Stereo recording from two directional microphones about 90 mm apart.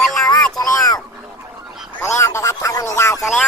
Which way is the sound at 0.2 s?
45° left (ahead or behind).